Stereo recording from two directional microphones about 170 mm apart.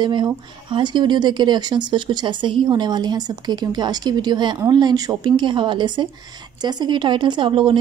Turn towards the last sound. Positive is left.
turn(degrees=-30)  # may be behind; listen again after turning